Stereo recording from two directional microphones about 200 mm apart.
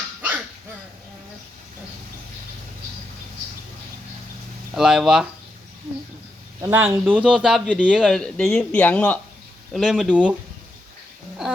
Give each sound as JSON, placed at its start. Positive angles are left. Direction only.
{"t": 4.7, "sound": "speech", "side_deg": -5}
{"t": 6.6, "sound": "speech", "side_deg": -15}
{"t": 11.4, "sound": "a sound", "side_deg": 0}